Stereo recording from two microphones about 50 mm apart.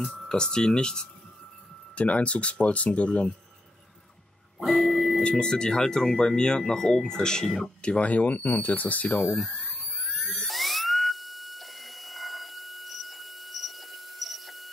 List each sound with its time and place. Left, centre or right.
0.3 s speech: centre
4.6 s a sound: centre
5.2 s speech: centre
7.8 s speech: centre
8.1 s speech: left
9.9 s dental drill: centre